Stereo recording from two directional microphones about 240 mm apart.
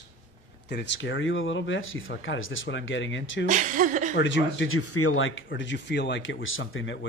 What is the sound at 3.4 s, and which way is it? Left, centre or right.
Speech, right.